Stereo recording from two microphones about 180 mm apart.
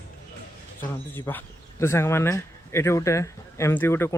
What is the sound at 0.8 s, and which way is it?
Speech, 10° left (ahead or behind).